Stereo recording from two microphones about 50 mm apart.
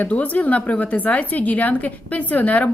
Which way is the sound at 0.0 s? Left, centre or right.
Left.